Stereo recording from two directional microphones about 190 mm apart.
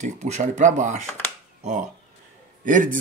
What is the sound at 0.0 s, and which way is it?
Speech, 40° right (ahead or behind).